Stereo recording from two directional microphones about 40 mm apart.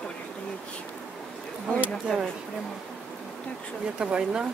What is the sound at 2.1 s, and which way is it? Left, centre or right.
Speech, centre.